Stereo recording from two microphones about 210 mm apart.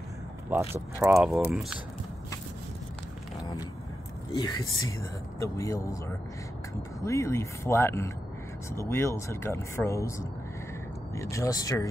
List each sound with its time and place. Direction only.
1.0 s speech: centre (ahead or behind)
4.3 s speech: 20° left (ahead or behind)